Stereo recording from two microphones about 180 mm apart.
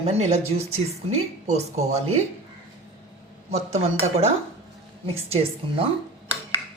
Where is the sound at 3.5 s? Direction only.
35° right (ahead or behind).